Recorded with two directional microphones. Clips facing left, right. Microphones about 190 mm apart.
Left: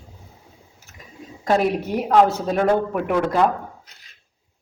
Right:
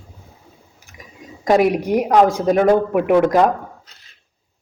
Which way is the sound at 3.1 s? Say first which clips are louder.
Right 5 dB; 20° right (ahead or behind).